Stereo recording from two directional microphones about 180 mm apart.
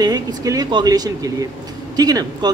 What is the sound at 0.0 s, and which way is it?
A man's voice, 20° right (ahead or behind).